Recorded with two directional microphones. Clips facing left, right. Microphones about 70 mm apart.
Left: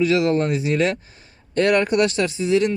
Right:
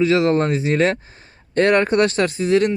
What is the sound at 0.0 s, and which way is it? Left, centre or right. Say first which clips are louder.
Speech: right 2 dB; right.